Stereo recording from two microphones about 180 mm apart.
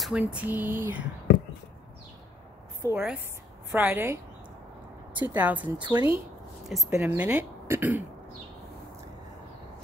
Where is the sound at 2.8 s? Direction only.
15° right (ahead or behind).